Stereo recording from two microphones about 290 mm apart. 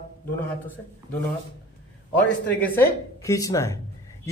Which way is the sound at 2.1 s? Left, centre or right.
Centre.